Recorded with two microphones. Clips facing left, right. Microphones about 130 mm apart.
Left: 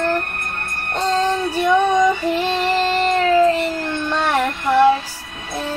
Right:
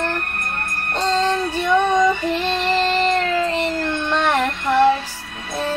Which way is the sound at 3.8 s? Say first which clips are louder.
Right 1 dB; 10° left (ahead or behind).